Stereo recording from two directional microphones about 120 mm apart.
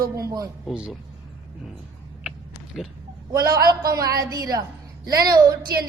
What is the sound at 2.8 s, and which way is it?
Speech, centre (ahead or behind).